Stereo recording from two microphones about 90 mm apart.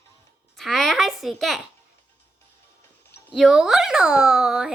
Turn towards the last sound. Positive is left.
turn(degrees=-5)  # may be behind; listen again after turning